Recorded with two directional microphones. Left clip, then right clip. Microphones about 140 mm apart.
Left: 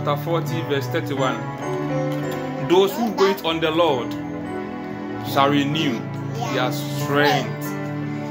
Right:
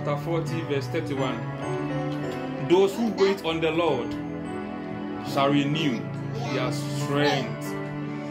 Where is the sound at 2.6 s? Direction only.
10° left (ahead or behind).